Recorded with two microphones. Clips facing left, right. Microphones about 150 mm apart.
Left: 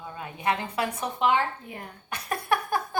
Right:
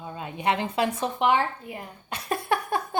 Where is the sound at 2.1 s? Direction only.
25° right (ahead or behind).